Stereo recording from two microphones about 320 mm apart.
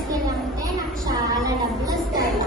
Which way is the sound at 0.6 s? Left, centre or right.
Centre.